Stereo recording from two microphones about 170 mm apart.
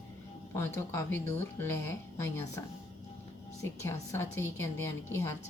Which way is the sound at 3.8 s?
15° left (ahead or behind).